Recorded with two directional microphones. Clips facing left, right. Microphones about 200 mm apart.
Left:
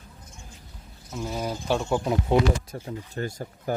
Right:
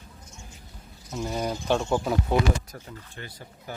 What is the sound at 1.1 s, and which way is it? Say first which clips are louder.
Speech: right 1 dB; centre (ahead or behind).